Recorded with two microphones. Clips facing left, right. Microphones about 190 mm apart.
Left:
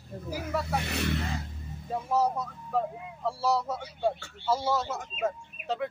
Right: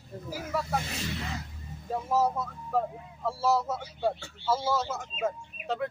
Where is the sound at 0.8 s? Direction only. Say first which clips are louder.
Left 5 dB; 65° left (ahead or behind).